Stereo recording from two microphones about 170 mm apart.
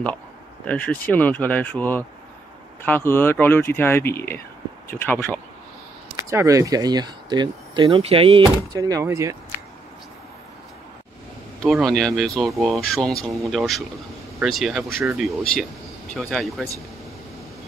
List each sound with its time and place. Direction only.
0.7 s speech: 10° left (ahead or behind)
6.1 s speech: 20° right (ahead or behind)
8.7 s speech: 20° right (ahead or behind)
11.6 s speech: centre (ahead or behind)
16.2 s speech: centre (ahead or behind)